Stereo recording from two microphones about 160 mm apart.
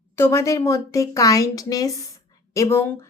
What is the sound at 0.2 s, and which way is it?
A woman's voice, 15° left (ahead or behind).